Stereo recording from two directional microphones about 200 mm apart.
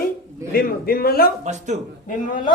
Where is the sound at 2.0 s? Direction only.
40° left (ahead or behind).